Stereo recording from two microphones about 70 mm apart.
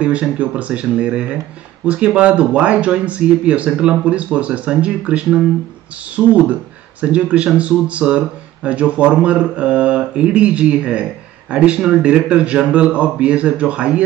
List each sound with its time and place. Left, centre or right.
0.0 s speech: centre